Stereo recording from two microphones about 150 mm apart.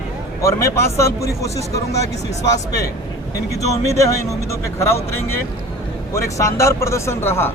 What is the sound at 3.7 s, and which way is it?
Speech, 20° left (ahead or behind).